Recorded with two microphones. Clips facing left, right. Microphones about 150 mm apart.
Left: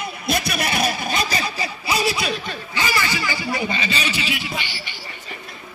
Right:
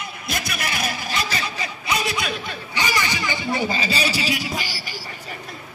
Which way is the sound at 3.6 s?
35° right (ahead or behind).